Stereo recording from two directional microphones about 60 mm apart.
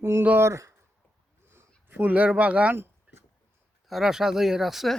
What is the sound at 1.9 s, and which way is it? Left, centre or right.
Speech, right.